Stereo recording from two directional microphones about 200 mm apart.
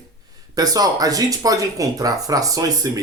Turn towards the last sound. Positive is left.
turn(degrees=-15)  # may be behind; listen again after turning